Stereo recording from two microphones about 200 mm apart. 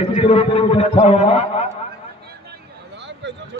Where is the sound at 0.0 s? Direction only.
30° left (ahead or behind).